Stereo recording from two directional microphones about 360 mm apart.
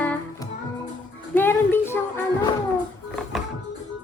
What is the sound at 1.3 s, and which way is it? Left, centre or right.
Music, centre.